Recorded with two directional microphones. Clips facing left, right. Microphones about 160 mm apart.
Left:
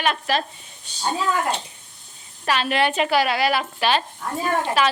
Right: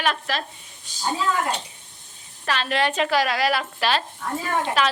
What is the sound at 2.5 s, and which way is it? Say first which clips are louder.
A woman's voice: left 2 dB; 10° left (ahead or behind).